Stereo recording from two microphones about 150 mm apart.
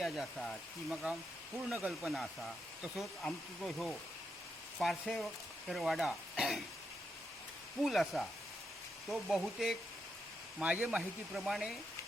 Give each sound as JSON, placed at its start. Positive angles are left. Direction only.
{"t": 0.0, "sound": "speech", "side_deg": 0}
{"t": 7.8, "sound": "speech", "side_deg": 0}